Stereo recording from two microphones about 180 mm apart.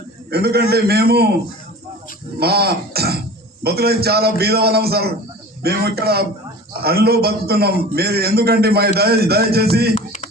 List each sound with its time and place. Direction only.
0.3 s a man's voice: 60° right (ahead or behind)
2.4 s a man's voice: 60° right (ahead or behind)
9.9 s music: 35° left (ahead or behind)